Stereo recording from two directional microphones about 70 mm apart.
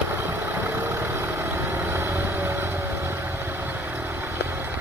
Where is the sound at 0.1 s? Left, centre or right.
Right.